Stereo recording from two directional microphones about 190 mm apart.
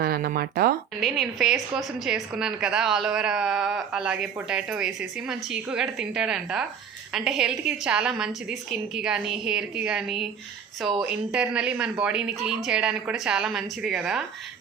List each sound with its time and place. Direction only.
0.0 s speech: 50° right (ahead or behind)
1.0 s a woman's voice: centre (ahead or behind)